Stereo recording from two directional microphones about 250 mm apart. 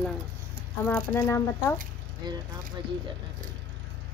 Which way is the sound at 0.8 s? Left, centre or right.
Centre.